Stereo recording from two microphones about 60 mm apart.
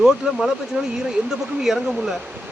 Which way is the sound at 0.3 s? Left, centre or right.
Centre.